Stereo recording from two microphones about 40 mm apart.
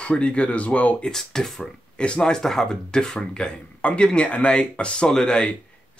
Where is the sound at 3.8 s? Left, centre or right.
Left.